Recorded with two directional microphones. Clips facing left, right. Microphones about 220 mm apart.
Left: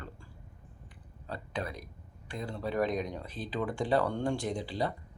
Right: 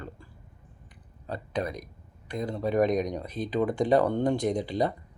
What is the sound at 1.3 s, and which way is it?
Speech, 20° right (ahead or behind).